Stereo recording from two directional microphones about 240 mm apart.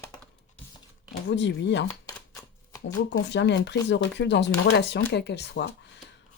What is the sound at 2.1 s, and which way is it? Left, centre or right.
Shuffling cards, centre.